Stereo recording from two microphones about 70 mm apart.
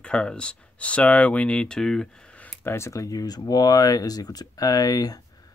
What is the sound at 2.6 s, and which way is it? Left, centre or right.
Speech, left.